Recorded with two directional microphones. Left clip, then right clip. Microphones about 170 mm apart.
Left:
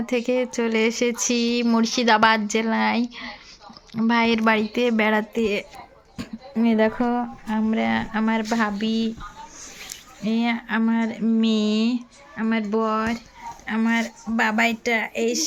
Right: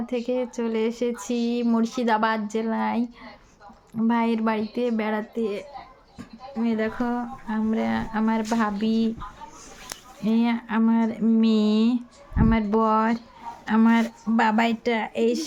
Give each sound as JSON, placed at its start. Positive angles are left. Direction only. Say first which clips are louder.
{"t": 0.0, "sound": "a woman's voice", "louder": "left 4 dB", "side_deg": 15}
{"t": 6.1, "sound": "a sound", "louder": "left 5 dB", "side_deg": 35}
{"t": 7.0, "sound": "speech", "louder": "left 4 dB", "side_deg": 20}
{"t": 7.4, "sound": "speech", "louder": "left 1 dB", "side_deg": 10}
{"t": 10.2, "sound": "speech", "louder": "left 1 dB", "side_deg": -5}
{"t": 11.3, "sound": "speech", "louder": "even", "side_deg": -10}
{"t": 13.7, "sound": "speech", "louder": "right 2 dB", "side_deg": -30}
{"t": 14.3, "sound": "speech", "louder": "left 1 dB", "side_deg": -20}